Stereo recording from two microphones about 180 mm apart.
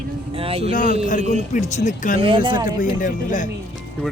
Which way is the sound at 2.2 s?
30° right (ahead or behind).